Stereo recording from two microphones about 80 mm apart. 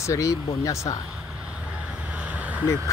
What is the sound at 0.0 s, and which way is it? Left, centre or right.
Speech, left.